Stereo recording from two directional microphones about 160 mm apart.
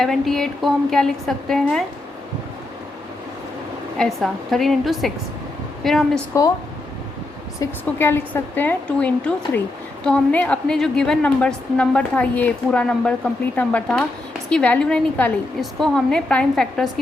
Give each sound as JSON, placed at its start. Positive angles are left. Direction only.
{"t": 0.0, "sound": "a woman's voice", "side_deg": 5}
{"t": 3.9, "sound": "a woman's voice", "side_deg": 5}
{"t": 6.3, "sound": "speech", "side_deg": 20}
{"t": 7.6, "sound": "a woman's voice", "side_deg": 15}